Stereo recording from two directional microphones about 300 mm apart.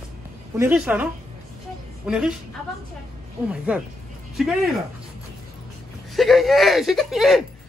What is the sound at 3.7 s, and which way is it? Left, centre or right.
Speech, centre.